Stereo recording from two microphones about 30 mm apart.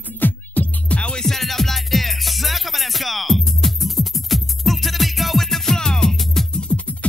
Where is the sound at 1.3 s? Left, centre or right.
Centre.